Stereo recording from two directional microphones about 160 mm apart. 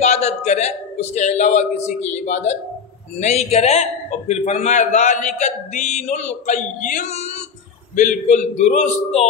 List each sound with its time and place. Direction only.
0.0 s a man's voice: 45° left (ahead or behind)
7.9 s a man's voice: 55° left (ahead or behind)